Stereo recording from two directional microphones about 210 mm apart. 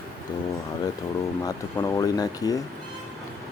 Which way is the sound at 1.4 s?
15° left (ahead or behind).